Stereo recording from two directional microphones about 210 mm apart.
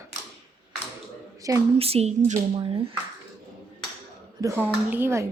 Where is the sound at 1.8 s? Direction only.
30° right (ahead or behind).